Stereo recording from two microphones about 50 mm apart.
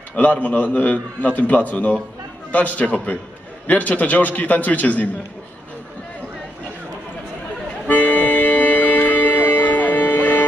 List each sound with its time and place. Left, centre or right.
0.1 s a man's voice: left
7.8 s music: left